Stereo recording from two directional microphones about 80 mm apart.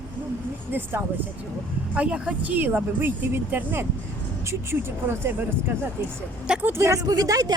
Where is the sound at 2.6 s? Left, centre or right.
Right.